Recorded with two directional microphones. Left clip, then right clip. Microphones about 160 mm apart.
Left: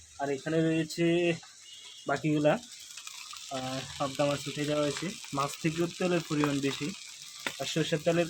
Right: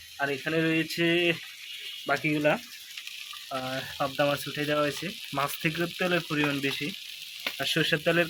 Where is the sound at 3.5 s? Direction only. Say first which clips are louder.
Right 4 dB; 5° left (ahead or behind).